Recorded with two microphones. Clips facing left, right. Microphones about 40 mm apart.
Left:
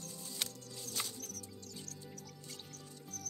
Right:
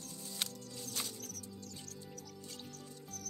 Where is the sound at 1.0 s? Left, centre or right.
Centre.